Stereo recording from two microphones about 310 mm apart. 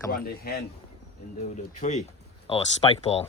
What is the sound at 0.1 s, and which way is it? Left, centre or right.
Speech, left.